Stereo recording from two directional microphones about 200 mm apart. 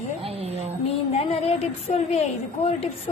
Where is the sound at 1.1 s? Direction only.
30° left (ahead or behind).